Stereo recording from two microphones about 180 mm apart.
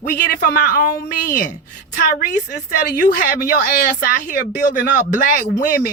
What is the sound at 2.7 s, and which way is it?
Speech, 50° left (ahead or behind).